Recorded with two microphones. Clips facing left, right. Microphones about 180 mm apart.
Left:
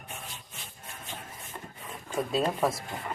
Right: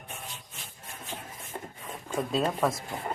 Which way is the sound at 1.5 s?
40° right (ahead or behind).